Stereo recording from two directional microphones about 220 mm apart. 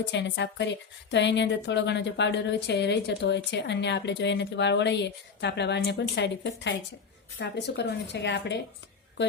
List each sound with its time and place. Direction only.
0.0 s a woman's voice: 55° left (ahead or behind)